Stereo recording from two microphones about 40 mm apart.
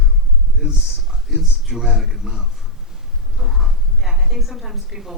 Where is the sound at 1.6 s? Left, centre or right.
Centre.